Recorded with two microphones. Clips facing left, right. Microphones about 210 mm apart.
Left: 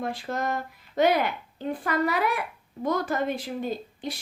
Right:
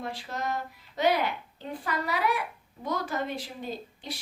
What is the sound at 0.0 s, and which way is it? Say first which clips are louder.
A woman's voice: left 5 dB; 50° left (ahead or behind).